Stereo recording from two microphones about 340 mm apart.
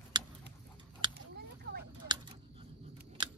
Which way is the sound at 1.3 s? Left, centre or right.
Right.